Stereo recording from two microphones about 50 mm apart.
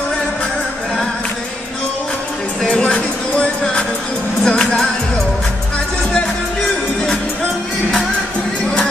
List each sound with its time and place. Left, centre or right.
2.7 s music: left